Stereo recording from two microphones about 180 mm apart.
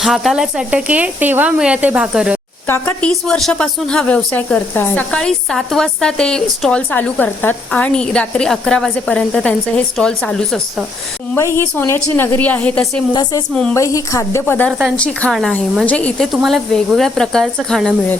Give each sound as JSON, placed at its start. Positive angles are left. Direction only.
{"t": 0.0, "sound": "speech", "side_deg": 0}
{"t": 2.6, "sound": "a woman's voice", "side_deg": 15}
{"t": 3.1, "sound": "speech", "side_deg": 0}
{"t": 11.3, "sound": "a woman's voice", "side_deg": 15}
{"t": 13.7, "sound": "a woman's voice", "side_deg": 15}
{"t": 14.7, "sound": "speech", "side_deg": -5}
{"t": 14.9, "sound": "speech", "side_deg": 5}